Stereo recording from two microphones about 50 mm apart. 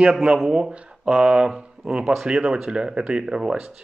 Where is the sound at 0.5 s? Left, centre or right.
Centre.